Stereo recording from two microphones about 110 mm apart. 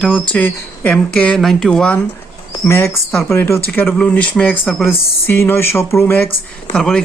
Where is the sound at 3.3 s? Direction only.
20° left (ahead or behind).